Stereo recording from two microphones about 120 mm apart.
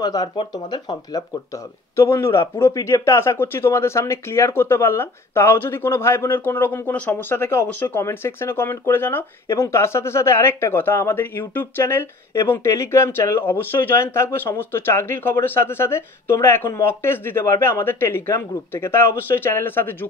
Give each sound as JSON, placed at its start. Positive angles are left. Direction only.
{"t": 0.0, "sound": "speech", "side_deg": 30}
{"t": 2.0, "sound": "a man's voice", "side_deg": 25}